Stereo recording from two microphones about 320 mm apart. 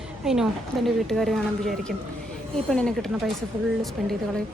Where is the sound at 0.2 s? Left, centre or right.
Centre.